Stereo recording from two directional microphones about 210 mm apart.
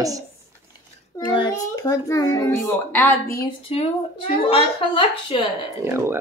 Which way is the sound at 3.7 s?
30° left (ahead or behind).